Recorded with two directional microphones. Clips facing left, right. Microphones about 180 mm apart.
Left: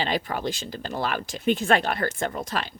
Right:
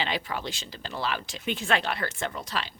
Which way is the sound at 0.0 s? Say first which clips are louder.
Left 4 dB; 45° left (ahead or behind).